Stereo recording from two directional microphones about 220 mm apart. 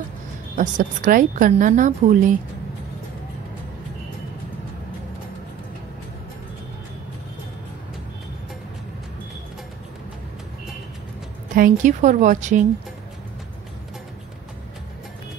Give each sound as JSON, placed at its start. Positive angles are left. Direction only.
{"t": 0.6, "sound": "a woman's voice", "side_deg": -35}
{"t": 11.5, "sound": "a woman's voice", "side_deg": -35}